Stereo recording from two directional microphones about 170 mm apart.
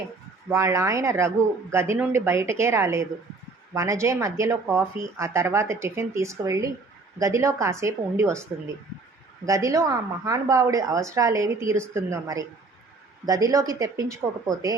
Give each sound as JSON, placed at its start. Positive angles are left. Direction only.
{"t": 0.5, "sound": "speech", "side_deg": -15}
{"t": 9.5, "sound": "a woman's voice", "side_deg": -20}